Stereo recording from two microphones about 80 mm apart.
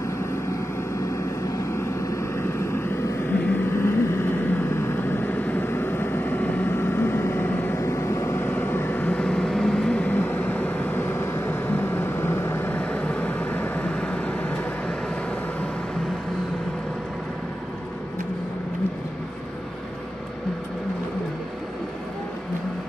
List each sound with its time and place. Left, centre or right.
1.1 s vehicle: left